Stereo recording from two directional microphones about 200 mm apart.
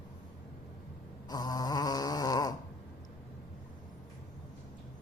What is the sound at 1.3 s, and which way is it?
Snoring, 20° left (ahead or behind).